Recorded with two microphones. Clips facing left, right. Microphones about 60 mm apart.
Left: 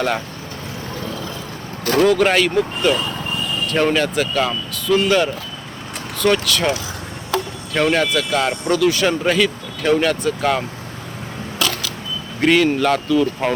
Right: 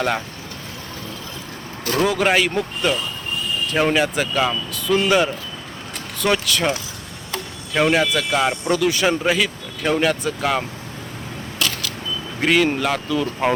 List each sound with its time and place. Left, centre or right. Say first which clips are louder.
2.0 s speech: left 3 dB; centre
7.7 s speech: even; centre
9.2 s speech: left 3 dB; centre
12.4 s speech: left 3 dB; centre